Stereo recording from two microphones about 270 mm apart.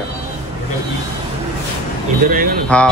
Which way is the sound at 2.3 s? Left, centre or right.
Right.